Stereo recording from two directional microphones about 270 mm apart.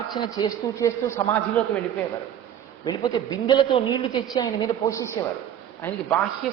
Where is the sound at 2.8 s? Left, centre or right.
Centre.